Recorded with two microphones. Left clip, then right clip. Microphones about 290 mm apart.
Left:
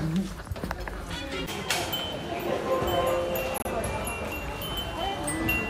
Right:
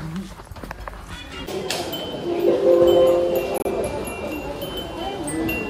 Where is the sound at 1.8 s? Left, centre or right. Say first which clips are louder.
Right 4 dB; centre.